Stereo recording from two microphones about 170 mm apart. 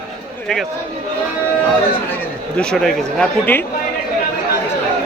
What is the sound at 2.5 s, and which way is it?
A man's voice, 5° left (ahead or behind).